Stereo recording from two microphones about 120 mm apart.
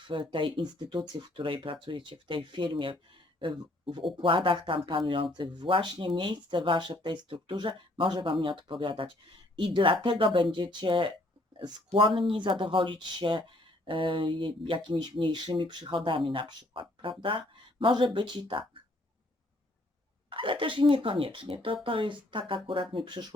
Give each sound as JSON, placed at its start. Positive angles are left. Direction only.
{"t": 0.1, "sound": "speech", "side_deg": -45}
{"t": 20.3, "sound": "speech", "side_deg": -45}